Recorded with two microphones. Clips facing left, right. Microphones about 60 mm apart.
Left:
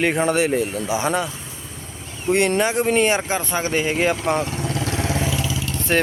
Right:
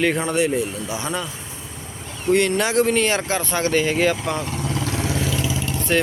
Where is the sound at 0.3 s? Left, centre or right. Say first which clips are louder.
Left 1 dB; left.